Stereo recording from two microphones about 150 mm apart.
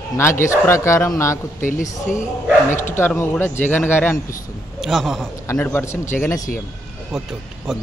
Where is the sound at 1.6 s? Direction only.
55° left (ahead or behind).